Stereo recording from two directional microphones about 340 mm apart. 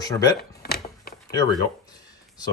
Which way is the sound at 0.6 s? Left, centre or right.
Left.